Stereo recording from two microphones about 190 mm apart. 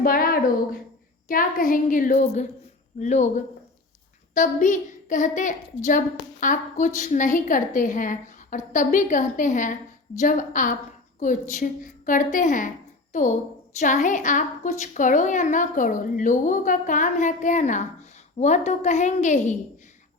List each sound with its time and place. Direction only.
0.0 s a woman's voice: 50° left (ahead or behind)
13.7 s a woman's voice: 40° left (ahead or behind)